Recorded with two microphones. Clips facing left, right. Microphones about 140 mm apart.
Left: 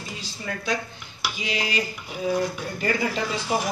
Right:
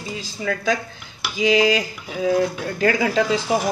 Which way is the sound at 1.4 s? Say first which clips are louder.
Right 12 dB; 90° right.